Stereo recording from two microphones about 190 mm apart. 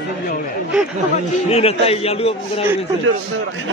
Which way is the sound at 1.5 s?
30° left (ahead or behind).